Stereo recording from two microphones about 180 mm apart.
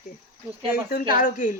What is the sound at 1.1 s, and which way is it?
Speech, 50° left (ahead or behind).